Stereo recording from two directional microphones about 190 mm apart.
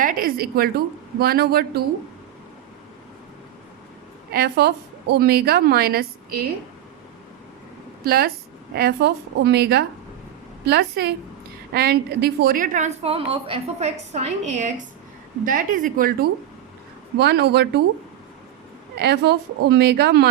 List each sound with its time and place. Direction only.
0.0 s a woman's voice: 45° right (ahead or behind)
4.3 s a woman's voice: 55° right (ahead or behind)
8.0 s a woman's voice: 55° right (ahead or behind)
18.9 s a woman's voice: 60° right (ahead or behind)